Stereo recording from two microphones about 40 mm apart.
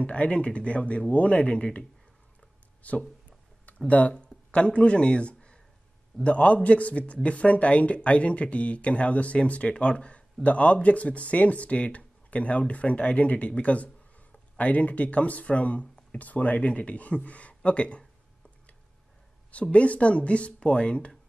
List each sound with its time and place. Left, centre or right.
0.0 s speech: left
19.5 s speech: left